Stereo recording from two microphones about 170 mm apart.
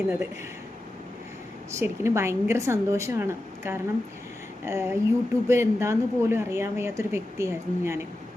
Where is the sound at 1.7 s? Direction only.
15° right (ahead or behind).